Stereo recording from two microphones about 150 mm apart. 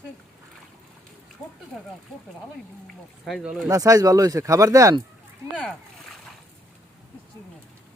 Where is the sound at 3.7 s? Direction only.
20° right (ahead or behind).